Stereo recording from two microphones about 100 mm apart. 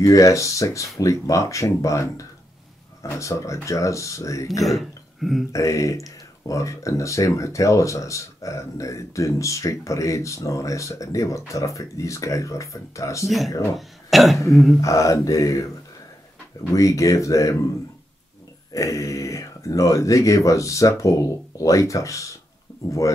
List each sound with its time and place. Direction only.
0.0 s speech: 30° left (ahead or behind)
4.6 s a sound: centre (ahead or behind)
5.5 s speech: 30° left (ahead or behind)
13.7 s speech: centre (ahead or behind)
14.8 s speech: 30° left (ahead or behind)
16.7 s speech: 30° left (ahead or behind)
18.7 s speech: 35° left (ahead or behind)